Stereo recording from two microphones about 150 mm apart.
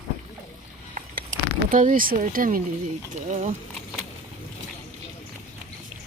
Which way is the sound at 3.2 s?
55° right (ahead or behind).